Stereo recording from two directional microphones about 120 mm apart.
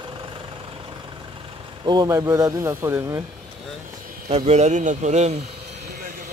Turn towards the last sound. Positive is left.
turn(degrees=-75)  # may be behind; listen again after turning